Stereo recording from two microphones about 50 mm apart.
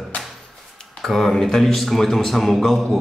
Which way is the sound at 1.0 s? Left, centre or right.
Centre.